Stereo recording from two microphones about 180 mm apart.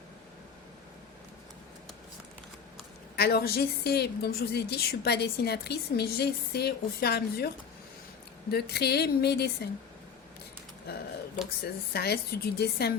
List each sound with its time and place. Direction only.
3.2 s a woman's voice: 60° left (ahead or behind)
11.6 s a woman's voice: 60° left (ahead or behind)